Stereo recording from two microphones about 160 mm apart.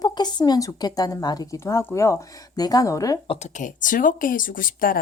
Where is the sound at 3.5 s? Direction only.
55° left (ahead or behind).